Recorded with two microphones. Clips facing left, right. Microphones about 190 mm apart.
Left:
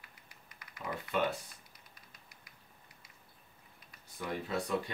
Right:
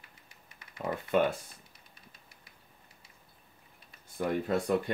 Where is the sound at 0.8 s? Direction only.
45° right (ahead or behind).